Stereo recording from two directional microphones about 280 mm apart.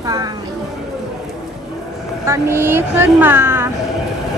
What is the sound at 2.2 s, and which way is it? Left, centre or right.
Speech, centre.